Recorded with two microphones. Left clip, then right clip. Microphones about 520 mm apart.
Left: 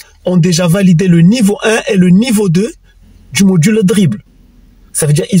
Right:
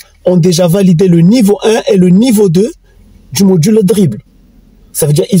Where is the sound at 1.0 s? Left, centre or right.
Right.